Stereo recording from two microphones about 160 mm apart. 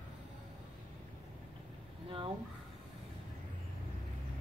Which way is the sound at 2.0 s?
35° right (ahead or behind).